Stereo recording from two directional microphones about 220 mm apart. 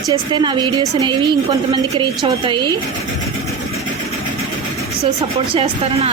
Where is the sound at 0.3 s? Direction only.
20° right (ahead or behind).